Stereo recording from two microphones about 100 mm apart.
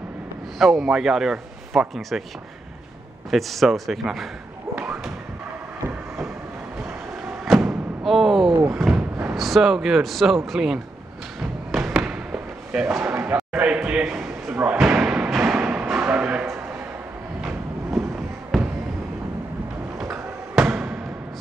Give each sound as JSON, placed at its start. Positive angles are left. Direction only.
{"t": 0.6, "sound": "a man's voice", "side_deg": -5}
{"t": 3.3, "sound": "a man's voice", "side_deg": 0}
{"t": 8.0, "sound": "a sound", "side_deg": 0}
{"t": 9.3, "sound": "a man's voice", "side_deg": 0}
{"t": 11.7, "sound": "basketball bounce", "side_deg": 0}
{"t": 12.8, "sound": "speech", "side_deg": -20}
{"t": 13.6, "sound": "a sound", "side_deg": -15}
{"t": 14.5, "sound": "slam", "side_deg": -15}
{"t": 15.2, "sound": "music", "side_deg": -20}
{"t": 17.4, "sound": "train", "side_deg": -5}
{"t": 18.5, "sound": "a sound", "side_deg": 5}
{"t": 20.0, "sound": "basketball bounce", "side_deg": -5}
{"t": 20.6, "sound": "music", "side_deg": -20}